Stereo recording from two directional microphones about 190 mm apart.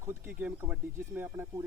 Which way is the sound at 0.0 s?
10° right (ahead or behind).